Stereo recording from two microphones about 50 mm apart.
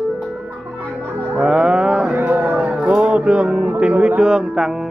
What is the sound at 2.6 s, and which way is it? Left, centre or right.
Music, right.